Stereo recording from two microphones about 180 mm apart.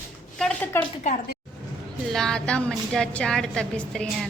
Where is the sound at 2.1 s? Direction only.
5° left (ahead or behind).